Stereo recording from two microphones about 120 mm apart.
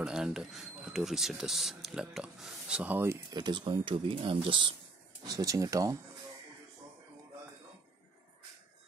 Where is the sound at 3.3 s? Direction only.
40° right (ahead or behind).